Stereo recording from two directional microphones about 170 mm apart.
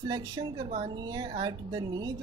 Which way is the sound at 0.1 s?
25° right (ahead or behind).